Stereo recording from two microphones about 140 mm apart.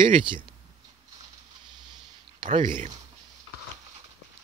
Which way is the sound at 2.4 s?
60° right (ahead or behind).